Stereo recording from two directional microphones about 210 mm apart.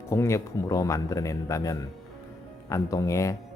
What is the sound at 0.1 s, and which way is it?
Speech, 15° left (ahead or behind).